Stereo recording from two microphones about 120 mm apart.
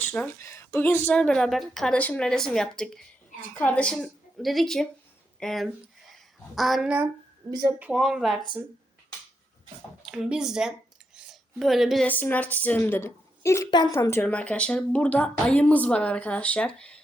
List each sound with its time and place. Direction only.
0.3 s a woman's voice: 20° left (ahead or behind); by 6.9 s centre (ahead or behind)
7.4 s a woman's voice: 25° right (ahead or behind)
7.9 s a woman's voice: centre (ahead or behind)
10.1 s speech: 5° right (ahead or behind)
12.0 s a woman's voice: 15° left (ahead or behind)
13.7 s speech: 40° left (ahead or behind)
13.9 s speech: 20° left (ahead or behind)
14.3 s a woman's voice: 10° left (ahead or behind)